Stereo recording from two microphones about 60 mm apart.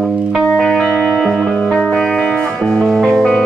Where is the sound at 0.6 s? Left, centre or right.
Centre.